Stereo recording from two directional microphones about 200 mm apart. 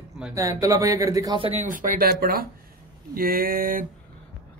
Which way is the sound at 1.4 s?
35° right (ahead or behind).